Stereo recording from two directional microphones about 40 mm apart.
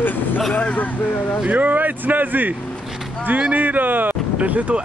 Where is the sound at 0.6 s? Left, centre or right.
Left.